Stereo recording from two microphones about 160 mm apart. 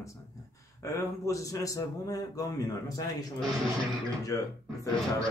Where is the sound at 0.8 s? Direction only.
20° left (ahead or behind).